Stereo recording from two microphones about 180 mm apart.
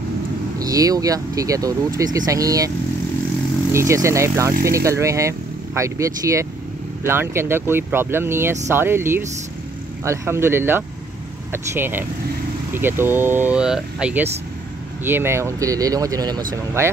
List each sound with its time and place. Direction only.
0.6 s speech: 20° right (ahead or behind)
3.7 s speech: 15° right (ahead or behind)